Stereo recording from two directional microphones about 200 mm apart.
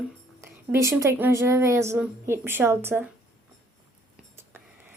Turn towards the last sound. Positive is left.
turn(degrees=-10)  # may be behind; listen again after turning